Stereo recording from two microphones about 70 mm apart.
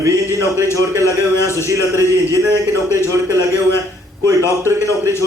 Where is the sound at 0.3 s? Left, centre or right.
Right.